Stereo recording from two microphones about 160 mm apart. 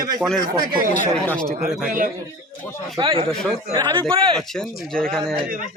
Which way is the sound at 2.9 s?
35° right (ahead or behind).